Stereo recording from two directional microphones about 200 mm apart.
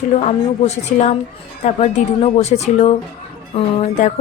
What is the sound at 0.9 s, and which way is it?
Speech, 35° left (ahead or behind).